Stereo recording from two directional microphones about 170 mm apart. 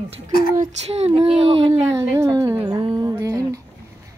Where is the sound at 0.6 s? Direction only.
40° right (ahead or behind).